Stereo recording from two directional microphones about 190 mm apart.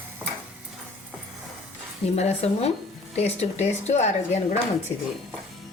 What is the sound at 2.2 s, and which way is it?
Speech, 35° left (ahead or behind).